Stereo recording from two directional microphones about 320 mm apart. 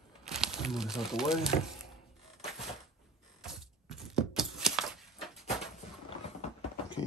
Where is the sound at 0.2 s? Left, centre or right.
Centre.